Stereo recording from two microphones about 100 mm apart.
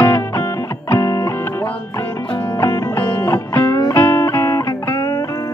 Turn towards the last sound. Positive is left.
turn(degrees=35)  # may be behind; listen again after turning